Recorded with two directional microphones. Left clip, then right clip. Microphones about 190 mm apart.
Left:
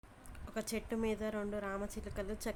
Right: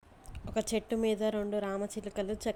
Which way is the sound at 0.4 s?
15° right (ahead or behind).